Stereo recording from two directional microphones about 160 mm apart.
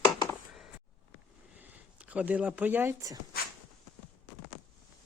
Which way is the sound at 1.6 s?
10° right (ahead or behind).